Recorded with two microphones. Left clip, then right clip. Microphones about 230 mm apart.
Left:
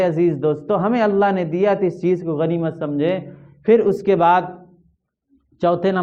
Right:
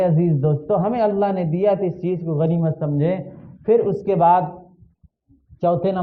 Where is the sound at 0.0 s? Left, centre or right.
Left.